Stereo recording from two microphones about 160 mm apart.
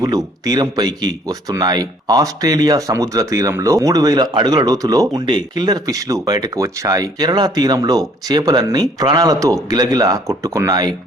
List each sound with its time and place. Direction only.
0.0 s speech: 25° right (ahead or behind)